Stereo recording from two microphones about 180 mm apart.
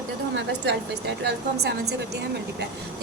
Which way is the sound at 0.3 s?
75° right (ahead or behind).